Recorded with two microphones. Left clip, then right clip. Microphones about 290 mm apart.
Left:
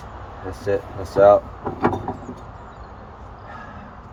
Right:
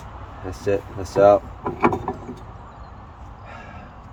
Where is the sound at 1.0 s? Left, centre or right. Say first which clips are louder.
Left 1 dB; right.